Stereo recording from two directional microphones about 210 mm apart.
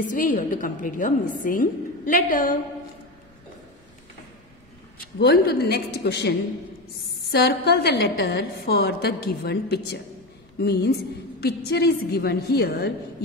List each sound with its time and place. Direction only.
0.1 s a woman's voice: 40° left (ahead or behind)
5.2 s a woman's voice: 45° left (ahead or behind)